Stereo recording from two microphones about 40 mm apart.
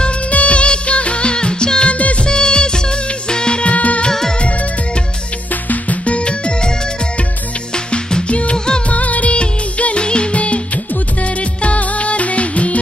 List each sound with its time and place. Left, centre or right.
0.3 s music: left
2.0 s music: left
2.2 s music: left
4.1 s music: centre
4.4 s music: left
7.7 s music: centre
8.3 s music: left
8.8 s music of bollywood: left
9.3 s music: left